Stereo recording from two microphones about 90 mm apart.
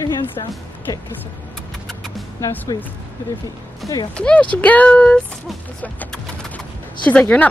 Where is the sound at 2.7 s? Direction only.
45° left (ahead or behind).